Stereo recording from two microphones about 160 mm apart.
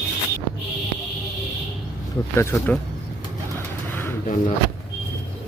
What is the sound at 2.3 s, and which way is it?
Speech, 15° left (ahead or behind).